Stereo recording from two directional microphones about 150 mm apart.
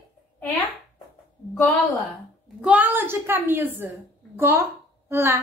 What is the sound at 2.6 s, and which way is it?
A child's voice, 10° right (ahead or behind).